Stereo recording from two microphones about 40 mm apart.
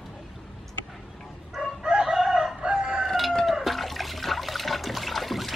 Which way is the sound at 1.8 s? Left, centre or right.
Centre.